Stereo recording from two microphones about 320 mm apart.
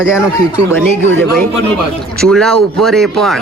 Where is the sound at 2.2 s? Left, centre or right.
Centre.